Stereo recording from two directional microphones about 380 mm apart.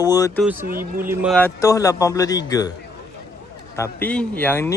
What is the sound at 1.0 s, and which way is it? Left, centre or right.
A man's voice, centre.